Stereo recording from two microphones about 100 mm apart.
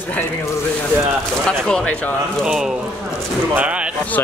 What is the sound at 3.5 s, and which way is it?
Speech, 15° right (ahead or behind).